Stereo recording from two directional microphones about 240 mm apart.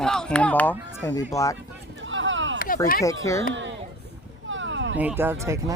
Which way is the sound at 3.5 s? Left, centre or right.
Right.